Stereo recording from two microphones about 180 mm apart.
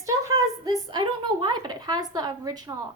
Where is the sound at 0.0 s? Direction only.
20° right (ahead or behind).